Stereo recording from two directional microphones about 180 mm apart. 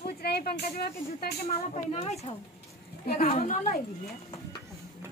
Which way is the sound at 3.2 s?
40° left (ahead or behind).